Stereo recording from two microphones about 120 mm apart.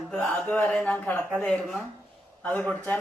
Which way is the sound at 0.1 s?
10° left (ahead or behind).